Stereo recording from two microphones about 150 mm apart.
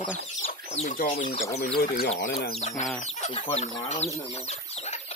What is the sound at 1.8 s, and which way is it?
Speech, 80° left.